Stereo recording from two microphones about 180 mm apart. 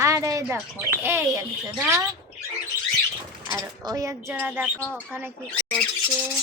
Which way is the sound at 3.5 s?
20° right (ahead or behind).